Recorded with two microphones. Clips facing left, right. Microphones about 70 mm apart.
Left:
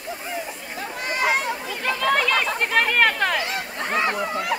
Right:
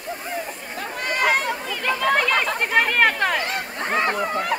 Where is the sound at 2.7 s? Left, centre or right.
Centre.